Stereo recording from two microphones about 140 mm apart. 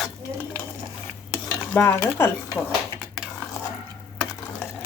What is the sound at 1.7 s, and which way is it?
Speech, 15° left (ahead or behind).